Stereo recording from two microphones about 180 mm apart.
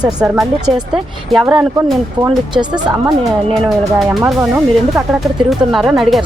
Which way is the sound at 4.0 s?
5° right (ahead or behind).